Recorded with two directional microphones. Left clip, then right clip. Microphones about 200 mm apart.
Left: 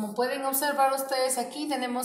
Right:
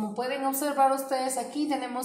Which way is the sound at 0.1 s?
40° right (ahead or behind).